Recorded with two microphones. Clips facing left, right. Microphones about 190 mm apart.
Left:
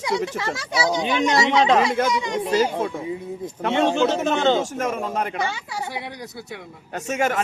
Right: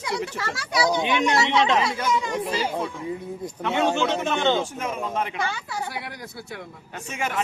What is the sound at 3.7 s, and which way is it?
Speech, 25° left (ahead or behind).